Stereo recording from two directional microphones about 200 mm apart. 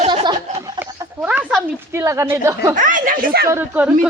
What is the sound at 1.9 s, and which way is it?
Speech, 15° right (ahead or behind).